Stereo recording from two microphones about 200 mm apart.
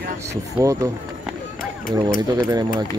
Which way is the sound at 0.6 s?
15° right (ahead or behind).